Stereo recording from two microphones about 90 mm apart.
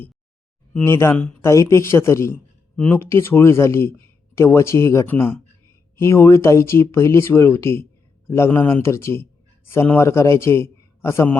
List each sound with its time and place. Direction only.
0.9 s speech: 30° left (ahead or behind)
1.1 s speech: 10° left (ahead or behind)
1.4 s speech: 30° left (ahead or behind)
2.7 s speech: 15° left (ahead or behind)
3.0 s a man's voice: 30° left (ahead or behind)